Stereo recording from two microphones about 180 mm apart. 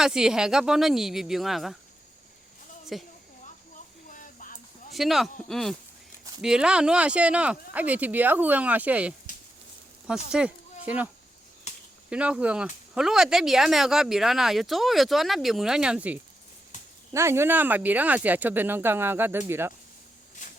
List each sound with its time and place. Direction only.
0.0 s speech: 5° right (ahead or behind)
2.9 s speech: centre (ahead or behind)
4.1 s a sound: 50° left (ahead or behind)
4.9 s speech: centre (ahead or behind)
10.3 s speech: 5° right (ahead or behind)
11.7 s a sound: 40° left (ahead or behind)
12.1 s speech: 5° right (ahead or behind)
16.7 s a sound: 45° left (ahead or behind)
17.1 s speech: 15° right (ahead or behind)